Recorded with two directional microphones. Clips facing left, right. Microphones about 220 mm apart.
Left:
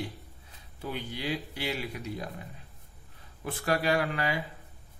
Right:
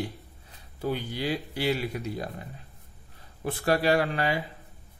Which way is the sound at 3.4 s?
35° right (ahead or behind).